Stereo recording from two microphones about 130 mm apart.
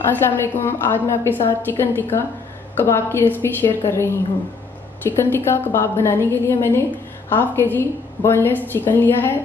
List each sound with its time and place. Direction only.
0.2 s a woman's voice: 15° left (ahead or behind)